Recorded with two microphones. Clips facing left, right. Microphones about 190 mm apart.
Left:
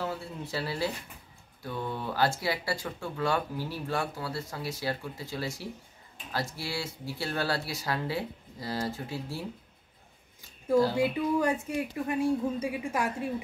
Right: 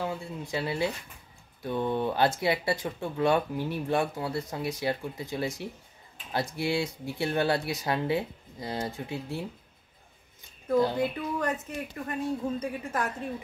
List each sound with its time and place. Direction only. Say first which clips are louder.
0.0 s speech: right 1 dB; 15° right (ahead or behind)
6.5 s speech: right 7 dB; 20° right (ahead or behind)
11.0 s a woman's voice: left 3 dB; 10° left (ahead or behind)